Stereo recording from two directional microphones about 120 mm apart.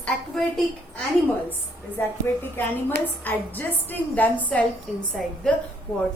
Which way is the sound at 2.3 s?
20° left (ahead or behind).